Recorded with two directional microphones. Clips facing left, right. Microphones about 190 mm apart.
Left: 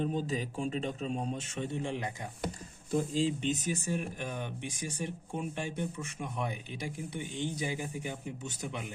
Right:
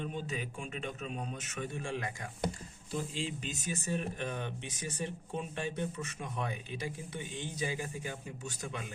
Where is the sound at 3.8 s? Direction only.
10° left (ahead or behind).